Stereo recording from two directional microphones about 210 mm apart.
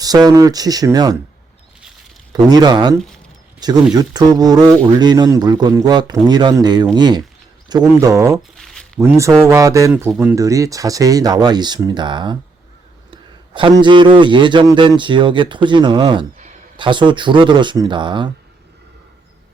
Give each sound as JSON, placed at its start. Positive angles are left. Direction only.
{"t": 0.0, "sound": "speech", "side_deg": -20}
{"t": 2.3, "sound": "a man's voice", "side_deg": -20}
{"t": 8.5, "sound": "a sound", "side_deg": 0}
{"t": 9.0, "sound": "a man's voice", "side_deg": -15}